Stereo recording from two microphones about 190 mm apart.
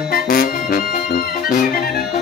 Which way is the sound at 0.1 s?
50° left (ahead or behind).